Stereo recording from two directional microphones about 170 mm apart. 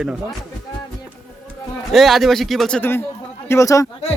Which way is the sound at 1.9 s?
Centre (ahead or behind).